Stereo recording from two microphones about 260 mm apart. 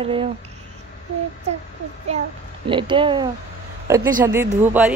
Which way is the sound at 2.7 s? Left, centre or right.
Centre.